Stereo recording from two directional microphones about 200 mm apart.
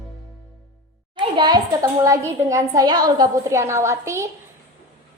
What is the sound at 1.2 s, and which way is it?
Child singing, 20° right (ahead or behind).